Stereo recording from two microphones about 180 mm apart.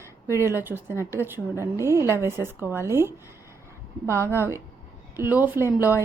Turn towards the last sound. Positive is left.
turn(degrees=-10)  # may be behind; listen again after turning